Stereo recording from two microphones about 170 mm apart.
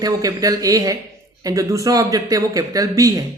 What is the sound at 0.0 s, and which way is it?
Speech, 20° right (ahead or behind).